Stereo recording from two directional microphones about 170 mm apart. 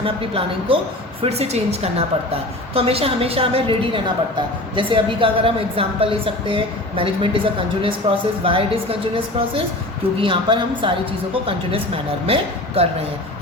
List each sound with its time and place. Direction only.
0.0 s a woman's voice: 35° right (ahead or behind)
12.2 s a woman's voice: 35° right (ahead or behind)